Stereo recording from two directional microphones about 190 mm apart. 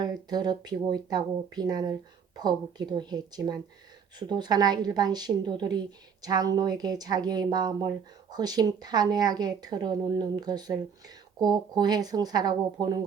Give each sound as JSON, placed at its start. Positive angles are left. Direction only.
{"t": 0.0, "sound": "speech", "side_deg": -20}